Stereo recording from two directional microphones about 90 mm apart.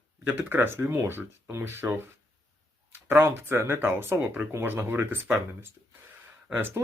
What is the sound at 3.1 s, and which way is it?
Speech, 25° right (ahead or behind).